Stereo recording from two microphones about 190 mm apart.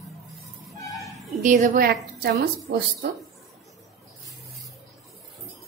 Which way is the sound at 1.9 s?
60° right (ahead or behind).